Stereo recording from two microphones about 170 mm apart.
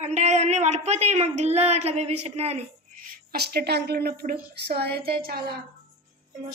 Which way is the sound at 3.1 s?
65° right (ahead or behind).